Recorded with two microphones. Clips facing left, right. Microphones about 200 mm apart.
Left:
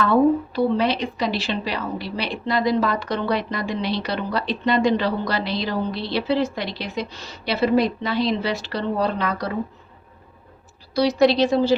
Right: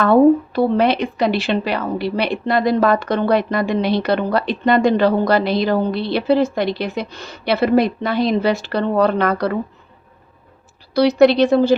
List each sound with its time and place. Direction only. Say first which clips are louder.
0.0 s speech: right 6 dB; 55° right (ahead or behind)
10.9 s speech: right 5 dB; 60° right (ahead or behind)